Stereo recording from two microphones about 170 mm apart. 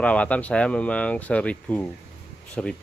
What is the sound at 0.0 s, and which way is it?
Speech, 5° left (ahead or behind).